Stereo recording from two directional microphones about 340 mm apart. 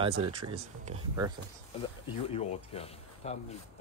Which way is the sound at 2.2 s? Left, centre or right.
Centre.